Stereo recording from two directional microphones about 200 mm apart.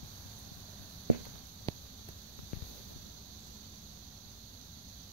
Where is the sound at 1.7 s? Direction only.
20° left (ahead or behind).